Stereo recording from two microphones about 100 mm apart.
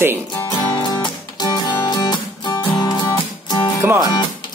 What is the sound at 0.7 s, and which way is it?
Music, 40° left (ahead or behind).